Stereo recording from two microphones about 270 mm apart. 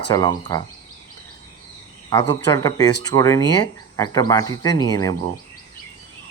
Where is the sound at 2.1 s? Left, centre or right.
Centre.